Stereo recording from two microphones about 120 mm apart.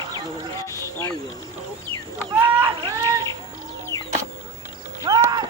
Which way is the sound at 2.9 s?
25° right (ahead or behind).